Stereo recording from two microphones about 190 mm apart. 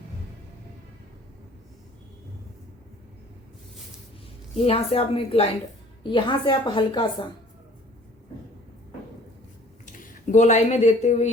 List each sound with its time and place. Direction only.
4.6 s a woman's voice: 30° left (ahead or behind)
9.8 s speech: 40° left (ahead or behind)